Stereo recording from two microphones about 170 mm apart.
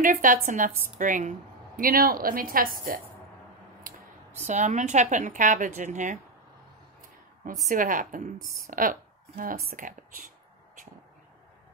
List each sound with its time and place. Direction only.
0.0 s a woman's voice: 55° right (ahead or behind)
4.4 s a woman's voice: 45° right (ahead or behind)
7.6 s a woman's voice: 55° right (ahead or behind)